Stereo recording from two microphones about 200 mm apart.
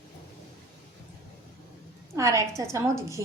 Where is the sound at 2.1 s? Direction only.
15° right (ahead or behind).